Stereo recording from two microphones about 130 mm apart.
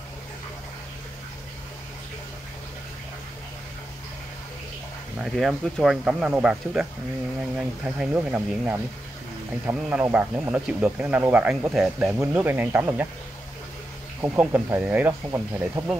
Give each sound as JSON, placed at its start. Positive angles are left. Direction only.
{"t": 5.2, "sound": "speech", "side_deg": -5}
{"t": 14.2, "sound": "speech", "side_deg": -15}